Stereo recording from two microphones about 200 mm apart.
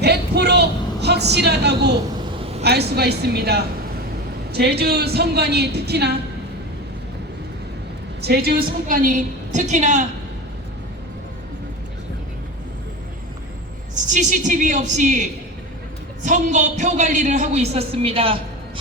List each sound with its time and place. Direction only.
0.0 s vehicle: 55° right (ahead or behind)
2.4 s vehicle: 30° right (ahead or behind)
2.6 s a woman's voice: 55° right (ahead or behind)
8.2 s a woman's voice: 50° right (ahead or behind)
13.9 s a woman's voice: 40° right (ahead or behind)